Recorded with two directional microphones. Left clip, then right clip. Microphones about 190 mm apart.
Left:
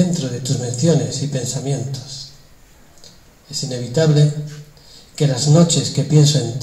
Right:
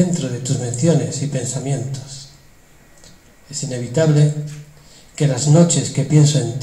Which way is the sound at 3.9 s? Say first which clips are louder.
Even; 5° left (ahead or behind).